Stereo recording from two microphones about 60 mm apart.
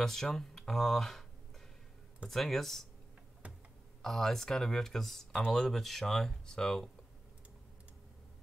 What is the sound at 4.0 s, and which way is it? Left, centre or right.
Speech, centre.